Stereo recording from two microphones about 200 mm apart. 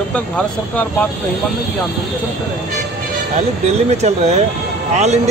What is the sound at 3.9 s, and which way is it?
Speech, 35° right (ahead or behind).